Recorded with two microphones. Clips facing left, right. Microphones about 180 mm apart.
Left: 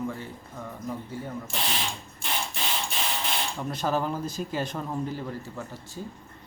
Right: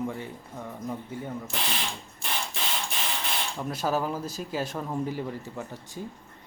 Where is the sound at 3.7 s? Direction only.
5° right (ahead or behind).